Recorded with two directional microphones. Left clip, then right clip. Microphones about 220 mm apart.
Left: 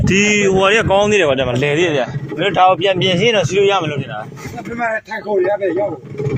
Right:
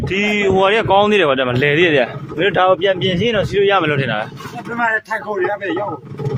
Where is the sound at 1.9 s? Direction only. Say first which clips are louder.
Right 3 dB; 35° right (ahead or behind).